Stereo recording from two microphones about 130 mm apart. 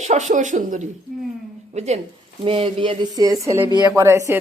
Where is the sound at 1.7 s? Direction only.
60° right (ahead or behind).